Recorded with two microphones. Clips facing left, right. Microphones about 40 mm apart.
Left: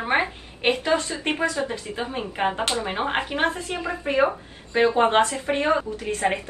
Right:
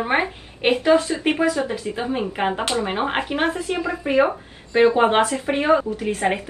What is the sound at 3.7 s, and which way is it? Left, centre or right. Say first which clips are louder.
Speech: right 4 dB; right.